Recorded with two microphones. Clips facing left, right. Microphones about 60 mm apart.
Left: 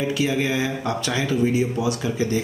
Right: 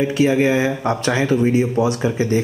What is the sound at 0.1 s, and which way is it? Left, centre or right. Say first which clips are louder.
Speech: right 7 dB; right.